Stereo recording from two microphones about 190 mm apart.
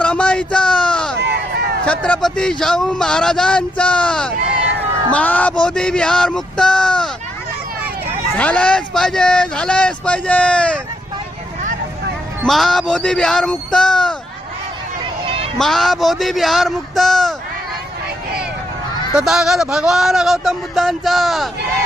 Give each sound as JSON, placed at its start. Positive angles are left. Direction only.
{"t": 0.0, "sound": "a sound", "side_deg": 5}
{"t": 1.1, "sound": "a sound", "side_deg": -60}
{"t": 1.8, "sound": "a man's voice", "side_deg": 5}
{"t": 8.4, "sound": "a man's voice", "side_deg": 5}
{"t": 12.5, "sound": "a man's voice", "side_deg": 0}
{"t": 15.5, "sound": "a man's voice", "side_deg": 0}
{"t": 19.1, "sound": "a man's voice", "side_deg": 0}